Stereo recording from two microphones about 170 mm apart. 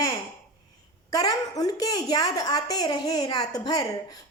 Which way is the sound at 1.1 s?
20° left (ahead or behind).